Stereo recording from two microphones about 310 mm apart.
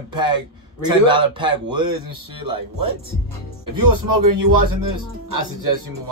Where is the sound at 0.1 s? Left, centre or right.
Centre.